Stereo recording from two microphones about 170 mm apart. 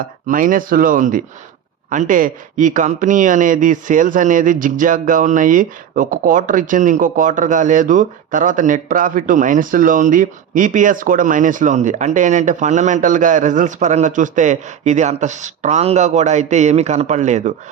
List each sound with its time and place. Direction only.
0.3 s speech: 50° right (ahead or behind)